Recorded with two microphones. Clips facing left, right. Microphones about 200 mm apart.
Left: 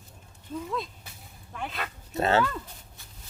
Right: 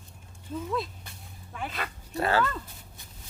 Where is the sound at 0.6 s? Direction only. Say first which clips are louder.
Right 2 dB; centre (ahead or behind).